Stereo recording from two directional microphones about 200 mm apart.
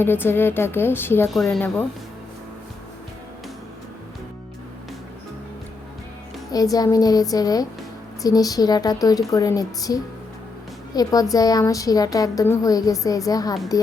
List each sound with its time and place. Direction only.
0.0 s a woman's voice: 10° left (ahead or behind)
6.5 s a woman's voice: 20° left (ahead or behind)